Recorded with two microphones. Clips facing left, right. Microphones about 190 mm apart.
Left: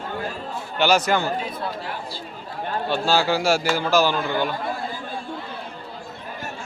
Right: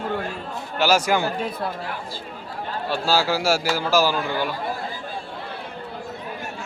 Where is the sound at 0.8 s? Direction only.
10° right (ahead or behind).